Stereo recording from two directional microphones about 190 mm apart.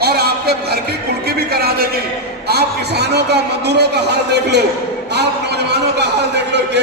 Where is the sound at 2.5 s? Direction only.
60° right (ahead or behind).